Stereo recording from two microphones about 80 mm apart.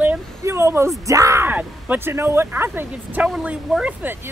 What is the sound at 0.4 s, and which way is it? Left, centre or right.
Speech, right.